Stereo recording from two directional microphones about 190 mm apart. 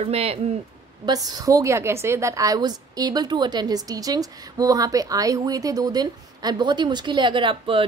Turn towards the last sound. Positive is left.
turn(degrees=-25)  # may be behind; listen again after turning